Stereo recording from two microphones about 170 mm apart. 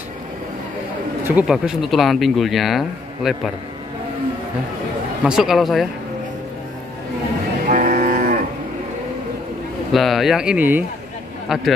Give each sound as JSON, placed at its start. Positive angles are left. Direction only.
{"t": 1.2, "sound": "speech", "side_deg": -5}
{"t": 5.2, "sound": "speech", "side_deg": -5}
{"t": 7.6, "sound": "music", "side_deg": -50}
{"t": 9.9, "sound": "speech", "side_deg": 0}